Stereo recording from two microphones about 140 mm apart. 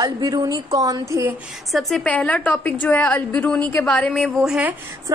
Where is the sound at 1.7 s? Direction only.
Centre (ahead or behind).